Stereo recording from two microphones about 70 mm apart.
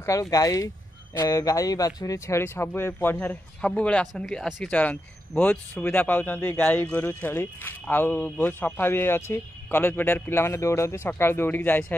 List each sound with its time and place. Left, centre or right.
0.0 s speech: left
2.1 s a man's voice: left
3.6 s speech: centre
4.6 s a man's voice: left
10.4 s a man's voice: left